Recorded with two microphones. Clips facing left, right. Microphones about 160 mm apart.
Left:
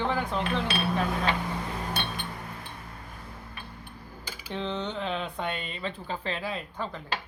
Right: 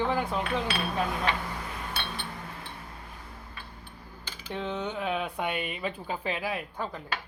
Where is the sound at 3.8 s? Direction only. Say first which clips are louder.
Left 3 dB; 10° left (ahead or behind).